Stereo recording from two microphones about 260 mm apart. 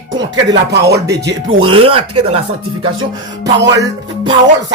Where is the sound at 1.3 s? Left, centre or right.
Right.